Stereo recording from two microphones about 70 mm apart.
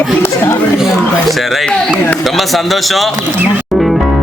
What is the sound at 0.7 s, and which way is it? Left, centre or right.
A man's voice, centre.